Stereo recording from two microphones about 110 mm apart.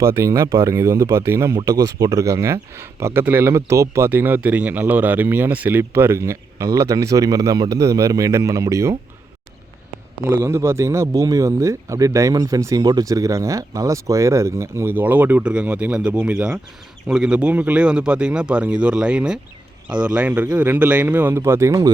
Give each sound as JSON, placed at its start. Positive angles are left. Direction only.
{"t": 0.0, "sound": "speech", "side_deg": -25}
{"t": 10.2, "sound": "speech", "side_deg": -25}